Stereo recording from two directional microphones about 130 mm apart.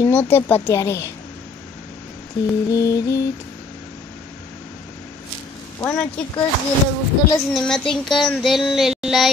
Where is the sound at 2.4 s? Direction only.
25° left (ahead or behind).